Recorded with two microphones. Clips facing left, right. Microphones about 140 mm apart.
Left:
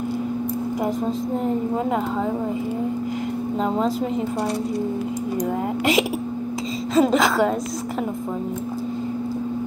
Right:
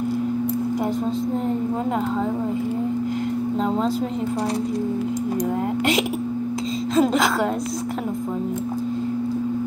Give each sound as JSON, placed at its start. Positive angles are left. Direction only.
{"t": 3.6, "sound": "a woman's voice", "side_deg": 0}
{"t": 7.0, "sound": "a woman's voice", "side_deg": 0}